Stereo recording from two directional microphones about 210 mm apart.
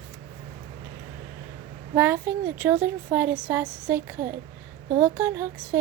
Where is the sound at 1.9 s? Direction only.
10° right (ahead or behind).